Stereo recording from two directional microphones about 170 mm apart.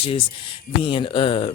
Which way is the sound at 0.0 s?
30° left (ahead or behind).